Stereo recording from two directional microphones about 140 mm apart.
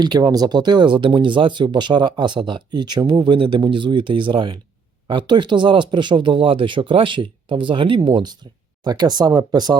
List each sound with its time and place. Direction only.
0.0 s speech: 30° right (ahead or behind)